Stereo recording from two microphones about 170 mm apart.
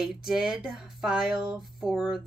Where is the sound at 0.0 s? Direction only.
Centre (ahead or behind).